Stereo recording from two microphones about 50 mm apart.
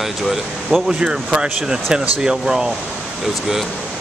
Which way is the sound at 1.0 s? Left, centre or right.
Centre.